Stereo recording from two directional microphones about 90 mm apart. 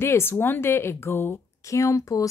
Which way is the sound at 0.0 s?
25° left (ahead or behind).